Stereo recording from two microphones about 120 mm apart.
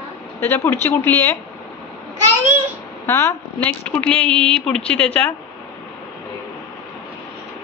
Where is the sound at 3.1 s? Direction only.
25° left (ahead or behind).